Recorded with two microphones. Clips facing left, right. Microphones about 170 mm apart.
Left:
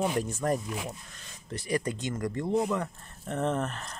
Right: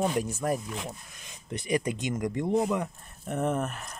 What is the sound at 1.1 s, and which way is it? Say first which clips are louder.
Speech: right 2 dB; 15° right (ahead or behind).